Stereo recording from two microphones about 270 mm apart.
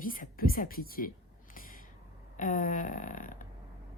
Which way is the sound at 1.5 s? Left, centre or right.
Left.